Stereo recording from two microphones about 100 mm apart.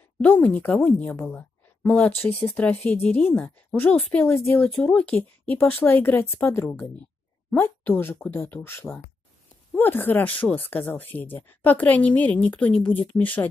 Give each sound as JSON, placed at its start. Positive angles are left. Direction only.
{"t": 0.2, "sound": "a woman's voice", "side_deg": 15}
{"t": 4.7, "sound": "speech", "side_deg": 10}
{"t": 8.8, "sound": "a woman's voice", "side_deg": 10}